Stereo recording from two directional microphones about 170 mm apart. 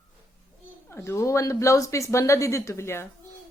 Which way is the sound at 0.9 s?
15° left (ahead or behind).